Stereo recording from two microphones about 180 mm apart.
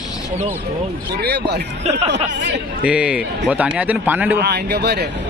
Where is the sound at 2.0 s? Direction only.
80° right.